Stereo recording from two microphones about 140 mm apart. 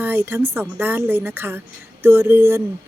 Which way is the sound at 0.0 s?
15° right (ahead or behind).